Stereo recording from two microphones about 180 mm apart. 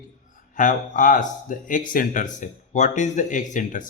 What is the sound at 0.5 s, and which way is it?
Speech, 45° left (ahead or behind).